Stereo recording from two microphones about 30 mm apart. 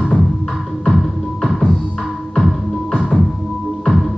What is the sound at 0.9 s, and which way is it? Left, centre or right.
Music, centre.